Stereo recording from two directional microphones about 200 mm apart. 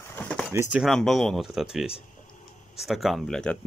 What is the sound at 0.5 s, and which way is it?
Speech, 10° right (ahead or behind).